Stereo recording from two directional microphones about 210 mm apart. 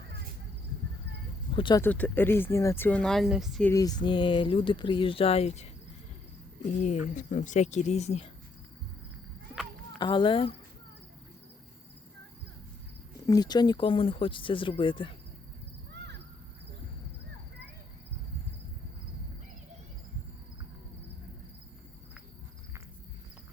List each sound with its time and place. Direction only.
1.5 s speech: 20° left (ahead or behind)
1.8 s speech: 10° left (ahead or behind)
3.7 s speech: 15° left (ahead or behind)
6.8 s speech: 35° left (ahead or behind)
10.0 s speech: 20° left (ahead or behind)
13.2 s speech: 20° left (ahead or behind)